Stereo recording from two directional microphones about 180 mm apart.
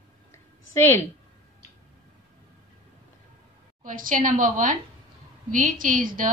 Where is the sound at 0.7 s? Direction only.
15° left (ahead or behind).